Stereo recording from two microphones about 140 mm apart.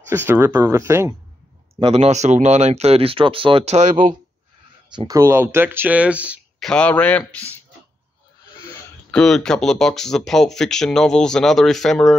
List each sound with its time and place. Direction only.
0.1 s speech: 15° right (ahead or behind)
1.9 s speech: 50° right (ahead or behind)
4.9 s speech: 25° right (ahead or behind); by 6.4 s 10° right (ahead or behind)
6.6 s a man's voice: 5° left (ahead or behind)
9.1 s speech: 5° left (ahead or behind)